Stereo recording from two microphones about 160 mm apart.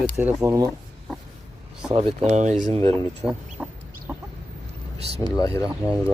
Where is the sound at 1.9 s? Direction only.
35° right (ahead or behind).